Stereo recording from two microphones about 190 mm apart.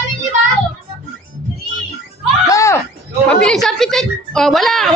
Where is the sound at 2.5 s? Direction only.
15° left (ahead or behind).